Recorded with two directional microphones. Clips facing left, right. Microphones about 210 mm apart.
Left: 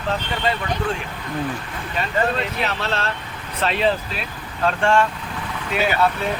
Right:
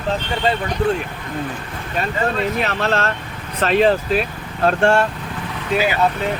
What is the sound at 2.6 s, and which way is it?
Speech, 50° right (ahead or behind).